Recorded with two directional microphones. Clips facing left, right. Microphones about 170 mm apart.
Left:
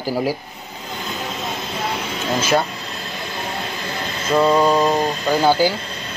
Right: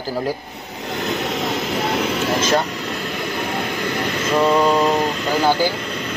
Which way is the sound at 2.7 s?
70° right (ahead or behind).